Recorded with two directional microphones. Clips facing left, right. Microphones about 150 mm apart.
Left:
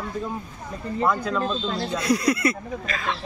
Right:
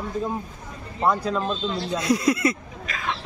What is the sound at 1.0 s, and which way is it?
Speech, 25° right (ahead or behind).